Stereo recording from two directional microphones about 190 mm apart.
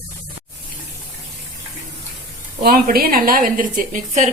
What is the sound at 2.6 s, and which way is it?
A woman's voice, 50° right (ahead or behind).